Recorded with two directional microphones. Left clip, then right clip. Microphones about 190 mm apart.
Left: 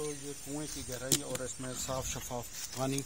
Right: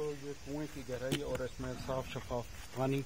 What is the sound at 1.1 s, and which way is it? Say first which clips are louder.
Speech: left 3 dB; 30° left (ahead or behind).